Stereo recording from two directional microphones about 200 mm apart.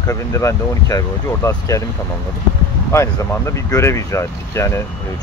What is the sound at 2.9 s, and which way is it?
Speech, 15° left (ahead or behind).